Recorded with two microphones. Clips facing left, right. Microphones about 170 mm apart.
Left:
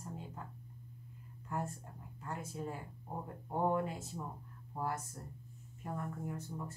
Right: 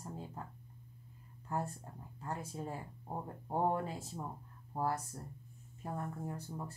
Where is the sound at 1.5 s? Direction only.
30° right (ahead or behind).